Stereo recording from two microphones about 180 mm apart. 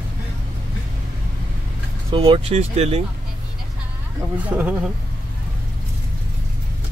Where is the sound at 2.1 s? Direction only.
25° right (ahead or behind).